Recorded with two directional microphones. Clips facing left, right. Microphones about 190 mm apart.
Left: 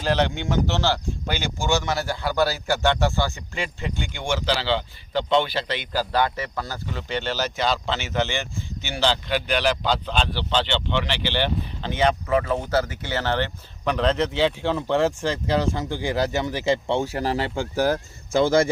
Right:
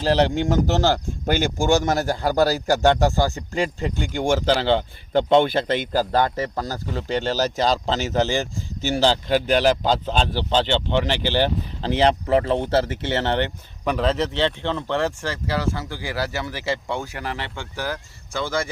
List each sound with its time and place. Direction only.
0.0 s speech: 35° right (ahead or behind)
13.8 s a man's voice: 5° right (ahead or behind); by 18.7 s 45° left (ahead or behind)